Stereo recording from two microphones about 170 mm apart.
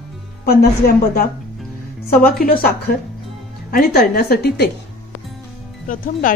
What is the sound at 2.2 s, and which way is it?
A woman's voice, 60° left (ahead or behind).